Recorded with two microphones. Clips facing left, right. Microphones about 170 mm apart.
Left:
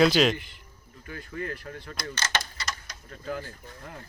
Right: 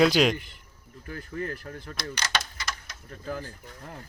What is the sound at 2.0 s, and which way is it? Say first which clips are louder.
Speech: even; 10° right (ahead or behind).